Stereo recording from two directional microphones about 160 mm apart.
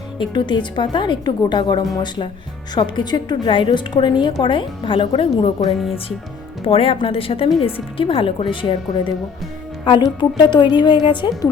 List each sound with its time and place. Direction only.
0.2 s a woman's voice: 30° left (ahead or behind)
6.7 s a woman's voice: 35° left (ahead or behind)